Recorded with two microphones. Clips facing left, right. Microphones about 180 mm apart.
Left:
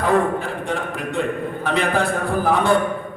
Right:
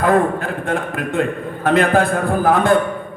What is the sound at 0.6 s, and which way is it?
A man's voice, 50° right (ahead or behind).